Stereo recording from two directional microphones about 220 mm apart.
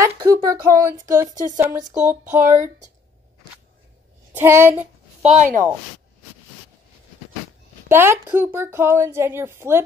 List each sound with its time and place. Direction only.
0.0 s a woman's voice: 15° right (ahead or behind)
4.4 s a woman's voice: 10° right (ahead or behind)
5.2 s speech: 30° right (ahead or behind)
7.9 s a woman's voice: 10° right (ahead or behind)